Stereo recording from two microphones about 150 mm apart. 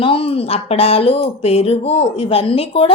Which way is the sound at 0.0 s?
35° left (ahead or behind).